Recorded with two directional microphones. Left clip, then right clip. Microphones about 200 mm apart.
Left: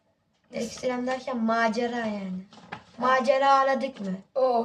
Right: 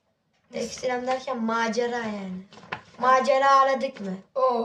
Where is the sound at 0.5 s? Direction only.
10° right (ahead or behind).